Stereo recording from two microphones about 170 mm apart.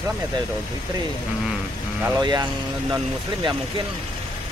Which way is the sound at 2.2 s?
25° right (ahead or behind).